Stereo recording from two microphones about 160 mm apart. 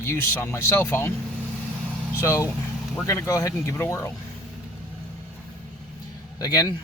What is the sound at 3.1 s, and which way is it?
Speech, 20° left (ahead or behind).